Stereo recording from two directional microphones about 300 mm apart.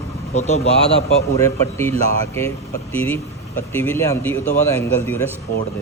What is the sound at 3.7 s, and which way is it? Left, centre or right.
Speech, centre.